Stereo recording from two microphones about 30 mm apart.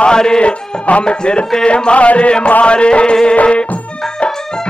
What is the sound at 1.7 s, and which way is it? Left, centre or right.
Music, left.